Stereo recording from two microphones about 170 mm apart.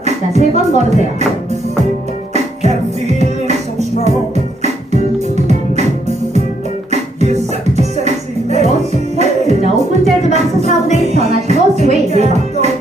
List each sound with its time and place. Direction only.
0.0 s speech: 40° right (ahead or behind)
2.3 s music: 40° right (ahead or behind)
6.9 s music: 40° right (ahead or behind)